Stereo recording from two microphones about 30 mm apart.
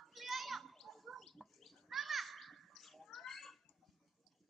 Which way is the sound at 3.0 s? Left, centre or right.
Centre.